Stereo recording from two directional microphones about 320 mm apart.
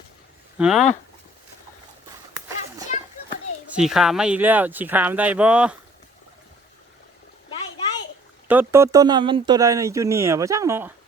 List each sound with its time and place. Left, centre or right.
0.6 s speech: centre
2.3 s a sound: centre
3.7 s speech: centre
8.4 s speech: centre